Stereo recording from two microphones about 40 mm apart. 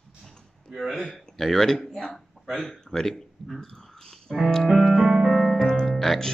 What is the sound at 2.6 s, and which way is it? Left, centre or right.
Speech, centre.